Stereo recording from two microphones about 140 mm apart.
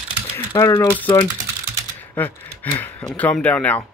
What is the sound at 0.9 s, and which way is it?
Speech, 10° left (ahead or behind).